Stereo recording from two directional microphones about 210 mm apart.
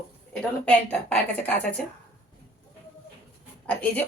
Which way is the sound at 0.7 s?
5° left (ahead or behind).